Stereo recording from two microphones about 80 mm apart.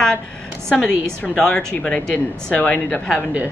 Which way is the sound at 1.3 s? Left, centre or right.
Centre.